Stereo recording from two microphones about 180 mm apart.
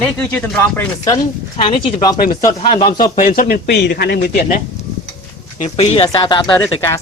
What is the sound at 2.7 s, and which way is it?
A man's voice, 50° left (ahead or behind).